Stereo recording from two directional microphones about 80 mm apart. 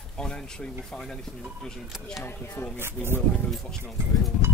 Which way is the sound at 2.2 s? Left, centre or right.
Left.